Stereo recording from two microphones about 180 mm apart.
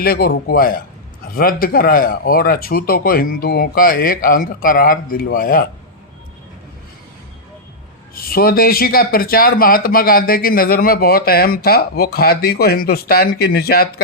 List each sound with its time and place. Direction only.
0.0 s speech: 60° left (ahead or behind)
8.1 s speech: 55° left (ahead or behind)